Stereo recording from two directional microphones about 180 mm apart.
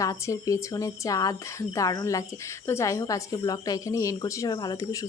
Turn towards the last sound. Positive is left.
turn(degrees=20)  # may be behind; listen again after turning